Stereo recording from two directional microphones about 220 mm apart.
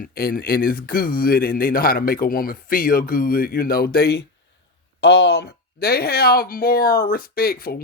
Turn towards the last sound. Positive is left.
turn(degrees=40)  # may be behind; listen again after turning